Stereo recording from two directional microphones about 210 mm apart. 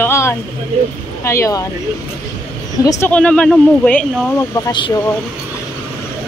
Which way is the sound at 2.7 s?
15° left (ahead or behind).